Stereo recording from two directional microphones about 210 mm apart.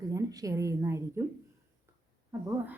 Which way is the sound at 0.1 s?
15° right (ahead or behind).